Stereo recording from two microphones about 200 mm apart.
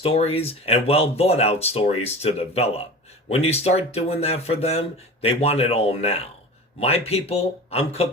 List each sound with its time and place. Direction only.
0.0 s speech: 30° left (ahead or behind)